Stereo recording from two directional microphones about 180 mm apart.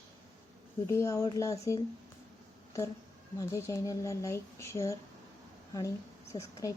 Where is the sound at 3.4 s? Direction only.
15° left (ahead or behind).